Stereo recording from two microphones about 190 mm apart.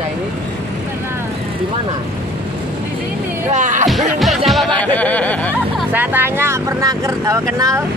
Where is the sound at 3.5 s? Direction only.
40° right (ahead or behind).